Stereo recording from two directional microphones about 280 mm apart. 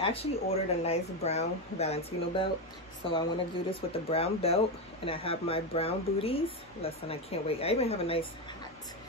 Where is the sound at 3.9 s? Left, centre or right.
Left.